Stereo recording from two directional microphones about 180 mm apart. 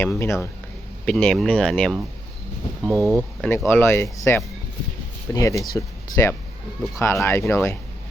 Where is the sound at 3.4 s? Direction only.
10° left (ahead or behind).